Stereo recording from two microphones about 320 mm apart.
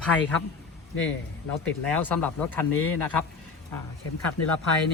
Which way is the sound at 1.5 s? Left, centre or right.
Centre.